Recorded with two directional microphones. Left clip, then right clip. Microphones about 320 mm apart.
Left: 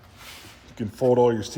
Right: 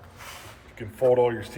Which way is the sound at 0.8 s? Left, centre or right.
Left.